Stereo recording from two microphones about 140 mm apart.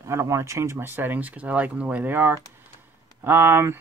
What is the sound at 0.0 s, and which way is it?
Speech, 20° right (ahead or behind).